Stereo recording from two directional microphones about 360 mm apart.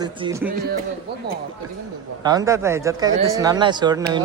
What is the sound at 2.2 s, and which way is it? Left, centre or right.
Speech, centre.